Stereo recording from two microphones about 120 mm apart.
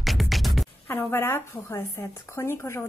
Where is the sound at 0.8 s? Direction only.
20° left (ahead or behind).